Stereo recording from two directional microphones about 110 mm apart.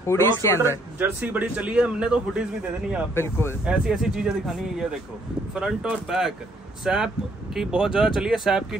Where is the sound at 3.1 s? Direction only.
20° left (ahead or behind).